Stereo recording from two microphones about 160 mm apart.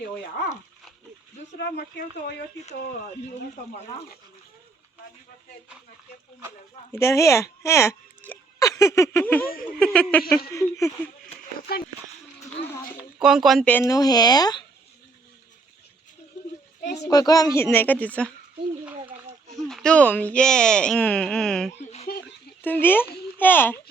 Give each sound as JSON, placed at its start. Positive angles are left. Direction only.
{"t": 1.5, "sound": "speech", "side_deg": 90}
{"t": 6.9, "sound": "a woman's voice", "side_deg": 20}
{"t": 7.6, "sound": "a sound", "side_deg": 15}
{"t": 9.7, "sound": "a woman's voice", "side_deg": 5}
{"t": 13.2, "sound": "speech", "side_deg": 0}
{"t": 13.9, "sound": "speech", "side_deg": 25}
{"t": 17.0, "sound": "a woman's voice", "side_deg": 25}
{"t": 19.0, "sound": "a sound", "side_deg": -20}
{"t": 19.6, "sound": "a woman's voice", "side_deg": 5}
{"t": 22.0, "sound": "a sound", "side_deg": 80}
{"t": 22.6, "sound": "a woman's voice", "side_deg": 10}